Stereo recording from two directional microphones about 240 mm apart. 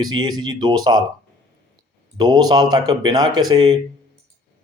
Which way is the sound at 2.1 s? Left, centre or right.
Centre.